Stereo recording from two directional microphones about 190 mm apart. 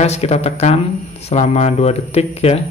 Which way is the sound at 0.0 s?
35° left (ahead or behind).